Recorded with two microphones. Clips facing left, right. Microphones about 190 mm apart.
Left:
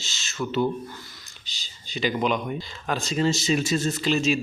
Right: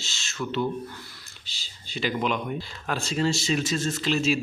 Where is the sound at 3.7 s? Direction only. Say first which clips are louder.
Left 3 dB; 20° left (ahead or behind).